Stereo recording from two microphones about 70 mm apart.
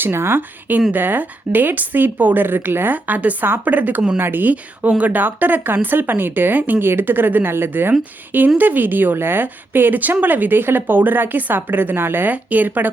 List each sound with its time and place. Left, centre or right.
0.0 s a woman's voice: right